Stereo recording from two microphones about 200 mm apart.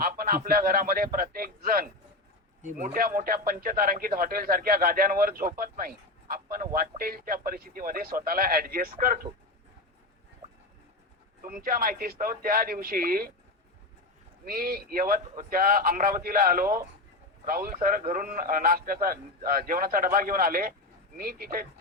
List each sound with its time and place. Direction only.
0.0 s speech: 45° right (ahead or behind)
11.4 s speech: 45° right (ahead or behind)
14.4 s speech: 50° right (ahead or behind)